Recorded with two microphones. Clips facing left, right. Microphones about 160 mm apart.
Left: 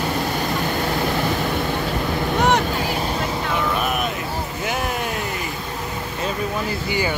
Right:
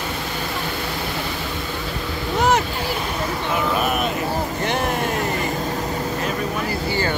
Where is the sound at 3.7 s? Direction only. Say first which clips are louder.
Right 2 dB; centre (ahead or behind).